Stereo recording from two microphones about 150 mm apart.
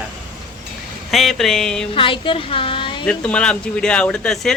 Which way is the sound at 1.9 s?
35° left (ahead or behind).